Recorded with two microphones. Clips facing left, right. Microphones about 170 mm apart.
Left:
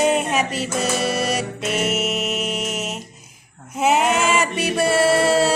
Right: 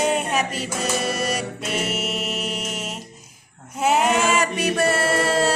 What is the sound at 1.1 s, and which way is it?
Mantra, 10° left (ahead or behind).